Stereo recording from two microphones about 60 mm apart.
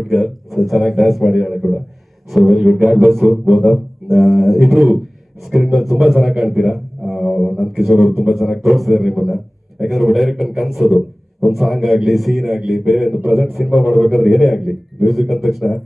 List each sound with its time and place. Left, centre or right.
0.0 s a man's voice: centre
13.7 s a man's voice: right
13.9 s a man's voice: centre